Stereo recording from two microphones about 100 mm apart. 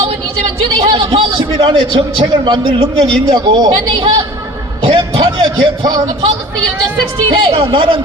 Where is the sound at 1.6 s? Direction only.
60° right (ahead or behind).